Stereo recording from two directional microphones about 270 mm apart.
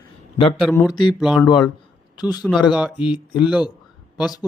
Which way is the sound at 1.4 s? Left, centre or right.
Centre.